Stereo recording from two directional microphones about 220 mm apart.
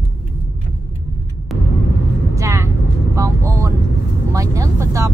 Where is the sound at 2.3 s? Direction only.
15° right (ahead or behind).